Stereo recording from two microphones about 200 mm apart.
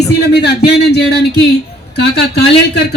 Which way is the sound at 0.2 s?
55° left (ahead or behind).